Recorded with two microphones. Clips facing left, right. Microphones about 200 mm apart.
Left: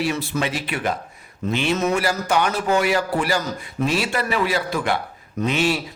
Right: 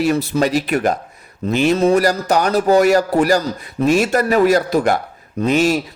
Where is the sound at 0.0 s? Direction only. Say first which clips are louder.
Right 7 dB; 40° right (ahead or behind).